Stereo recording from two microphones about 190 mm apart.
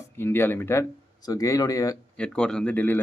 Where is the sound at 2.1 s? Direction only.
5° left (ahead or behind).